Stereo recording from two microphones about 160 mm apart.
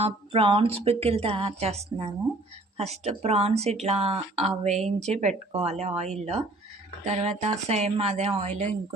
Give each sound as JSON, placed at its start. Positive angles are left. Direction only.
{"t": 0.0, "sound": "a woman's voice", "side_deg": -35}